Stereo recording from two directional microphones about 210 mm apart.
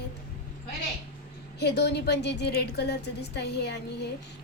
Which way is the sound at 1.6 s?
55° left (ahead or behind).